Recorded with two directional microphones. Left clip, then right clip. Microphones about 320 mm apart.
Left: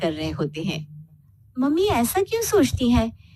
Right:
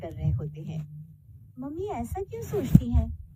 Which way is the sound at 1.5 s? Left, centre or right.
Left.